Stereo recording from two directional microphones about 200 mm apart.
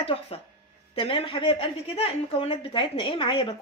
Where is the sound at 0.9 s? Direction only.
25° left (ahead or behind).